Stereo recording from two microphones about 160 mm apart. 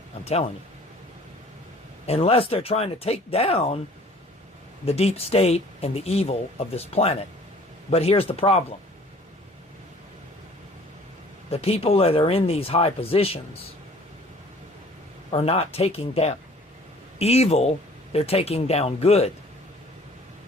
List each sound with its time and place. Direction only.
0.3 s speech: 40° left (ahead or behind)
2.0 s speech: 40° left (ahead or behind)
4.9 s speech: 40° left (ahead or behind)
11.5 s speech: 40° left (ahead or behind)
15.3 s speech: 40° left (ahead or behind)